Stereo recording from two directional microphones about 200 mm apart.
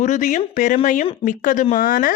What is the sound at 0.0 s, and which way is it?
Speech, 40° left (ahead or behind).